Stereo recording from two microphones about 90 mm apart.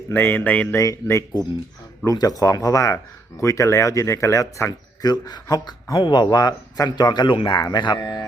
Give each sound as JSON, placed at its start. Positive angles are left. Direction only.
{"t": 0.1, "sound": "speech", "side_deg": 20}
{"t": 0.8, "sound": "speech", "side_deg": 35}
{"t": 5.1, "sound": "speech", "side_deg": 50}